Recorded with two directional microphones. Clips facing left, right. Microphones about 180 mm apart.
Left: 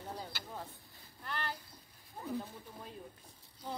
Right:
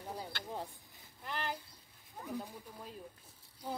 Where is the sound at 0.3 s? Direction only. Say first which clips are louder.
Right 3 dB; 5° left (ahead or behind).